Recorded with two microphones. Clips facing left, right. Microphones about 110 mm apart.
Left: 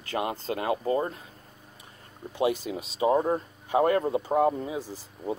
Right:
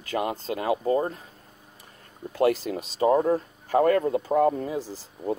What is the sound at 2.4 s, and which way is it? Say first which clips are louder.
Speech: right 4 dB; 55° right (ahead or behind).